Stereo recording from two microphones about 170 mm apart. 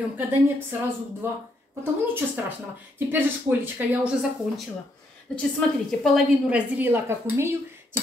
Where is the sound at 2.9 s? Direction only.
10° right (ahead or behind).